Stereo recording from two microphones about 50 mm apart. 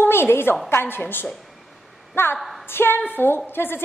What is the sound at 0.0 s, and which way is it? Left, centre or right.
A woman's voice, left.